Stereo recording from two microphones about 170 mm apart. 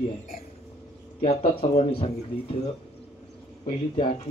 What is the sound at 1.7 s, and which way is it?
Speech, 35° left (ahead or behind).